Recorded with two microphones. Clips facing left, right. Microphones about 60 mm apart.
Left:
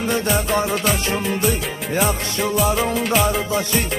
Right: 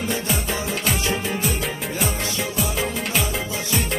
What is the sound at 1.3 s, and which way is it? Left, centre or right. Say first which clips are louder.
Music: left 4 dB; centre.